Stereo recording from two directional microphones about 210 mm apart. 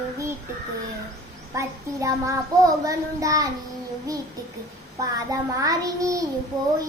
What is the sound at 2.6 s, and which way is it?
Child singing, 15° right (ahead or behind).